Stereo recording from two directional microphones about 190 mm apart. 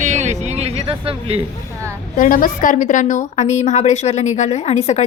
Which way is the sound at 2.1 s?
45° left (ahead or behind).